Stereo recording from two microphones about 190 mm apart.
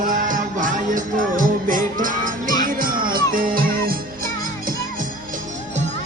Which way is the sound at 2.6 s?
50° right (ahead or behind).